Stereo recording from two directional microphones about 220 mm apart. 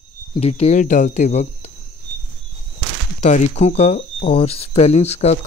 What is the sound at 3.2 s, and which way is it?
Speech, 35° left (ahead or behind).